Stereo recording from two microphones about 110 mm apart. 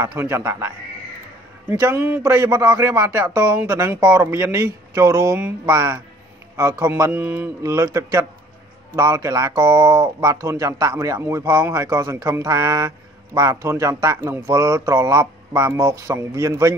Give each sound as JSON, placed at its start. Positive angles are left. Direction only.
{"t": 0.0, "sound": "a man's voice", "side_deg": -20}
{"t": 7.6, "sound": "speech", "side_deg": -30}